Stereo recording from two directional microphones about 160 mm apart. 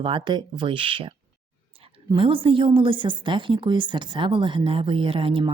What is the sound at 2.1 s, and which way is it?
A woman's voice, 35° right (ahead or behind).